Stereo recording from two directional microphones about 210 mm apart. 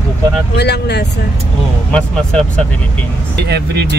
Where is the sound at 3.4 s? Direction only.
50° right (ahead or behind).